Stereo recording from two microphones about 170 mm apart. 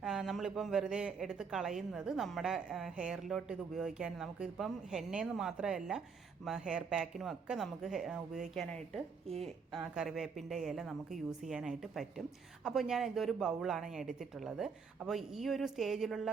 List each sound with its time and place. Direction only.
0.0 s a woman's voice: centre (ahead or behind)